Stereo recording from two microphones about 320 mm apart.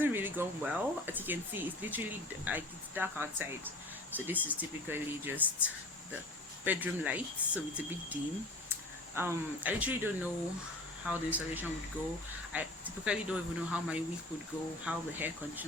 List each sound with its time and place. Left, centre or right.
0.0 s speech: centre